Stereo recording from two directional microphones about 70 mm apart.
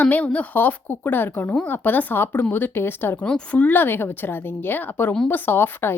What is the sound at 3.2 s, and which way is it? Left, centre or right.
A woman's voice, centre.